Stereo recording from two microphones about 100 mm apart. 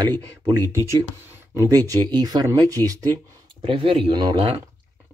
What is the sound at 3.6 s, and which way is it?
Speech, 60° right (ahead or behind).